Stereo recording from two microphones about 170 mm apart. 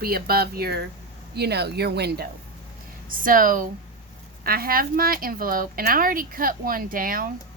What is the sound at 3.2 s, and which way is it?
A woman's voice, 55° right (ahead or behind).